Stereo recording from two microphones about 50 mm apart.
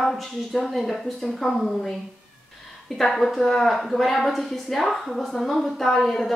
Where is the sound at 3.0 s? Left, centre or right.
Centre.